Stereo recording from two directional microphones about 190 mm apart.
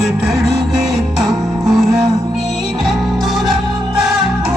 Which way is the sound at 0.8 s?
Centre (ahead or behind).